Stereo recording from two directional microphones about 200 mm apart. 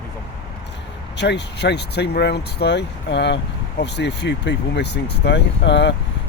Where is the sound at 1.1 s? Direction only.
60° left (ahead or behind).